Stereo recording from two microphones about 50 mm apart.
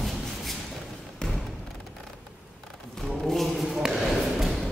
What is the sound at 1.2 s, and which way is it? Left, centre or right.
Music, centre.